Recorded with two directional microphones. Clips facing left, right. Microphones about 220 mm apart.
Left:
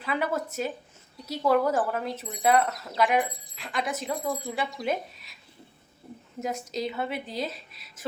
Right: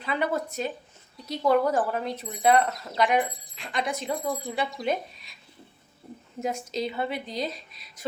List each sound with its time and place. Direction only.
0.0 s speech: 5° left (ahead or behind)
6.7 s speech: centre (ahead or behind)